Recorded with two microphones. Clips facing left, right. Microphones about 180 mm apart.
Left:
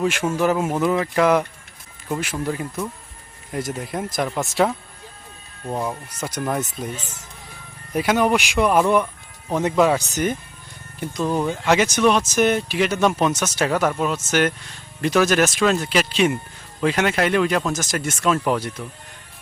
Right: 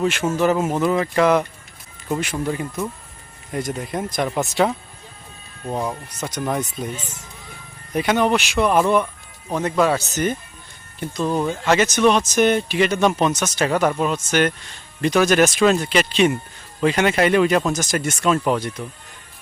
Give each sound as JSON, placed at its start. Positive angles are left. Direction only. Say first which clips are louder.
{"t": 0.0, "sound": "speech", "louder": "right 1 dB", "side_deg": 10}
{"t": 6.9, "sound": "speech", "louder": "right 1 dB", "side_deg": -10}
{"t": 7.9, "sound": "speech", "louder": "even", "side_deg": 5}